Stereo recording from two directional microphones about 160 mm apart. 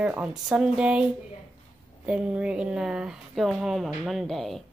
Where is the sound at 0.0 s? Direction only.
5° right (ahead or behind).